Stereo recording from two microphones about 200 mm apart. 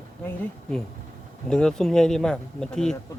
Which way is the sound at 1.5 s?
5° left (ahead or behind).